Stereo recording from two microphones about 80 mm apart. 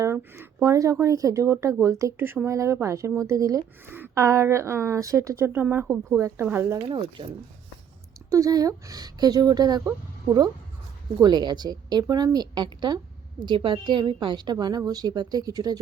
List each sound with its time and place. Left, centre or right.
0.6 s speech: right
2.1 s speech: right
2.5 s speech: right
3.8 s a sound: right
4.1 s speech: right
6.4 s speech: right
8.3 s speech: right
11.2 s a woman's voice: right
13.4 s a woman's voice: right